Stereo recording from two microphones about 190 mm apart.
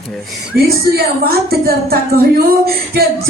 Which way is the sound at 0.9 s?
55° right (ahead or behind).